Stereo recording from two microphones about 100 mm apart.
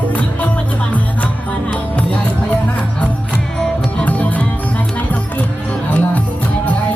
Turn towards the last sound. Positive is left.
turn(degrees=15)  # may be behind; listen again after turning